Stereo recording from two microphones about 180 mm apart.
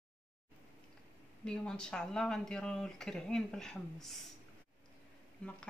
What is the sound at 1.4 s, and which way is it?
Speech, 5° left (ahead or behind).